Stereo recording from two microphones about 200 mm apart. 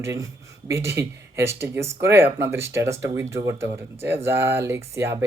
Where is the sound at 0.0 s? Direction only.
15° right (ahead or behind).